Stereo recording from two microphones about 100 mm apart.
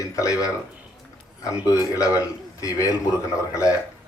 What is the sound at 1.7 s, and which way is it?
Speech, 35° left (ahead or behind).